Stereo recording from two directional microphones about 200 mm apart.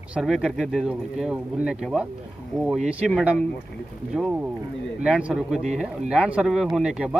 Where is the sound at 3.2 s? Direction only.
5° right (ahead or behind).